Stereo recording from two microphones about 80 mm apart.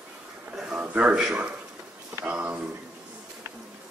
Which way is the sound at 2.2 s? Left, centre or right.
Centre.